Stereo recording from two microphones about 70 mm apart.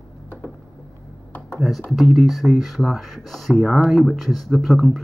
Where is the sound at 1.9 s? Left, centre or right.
Centre.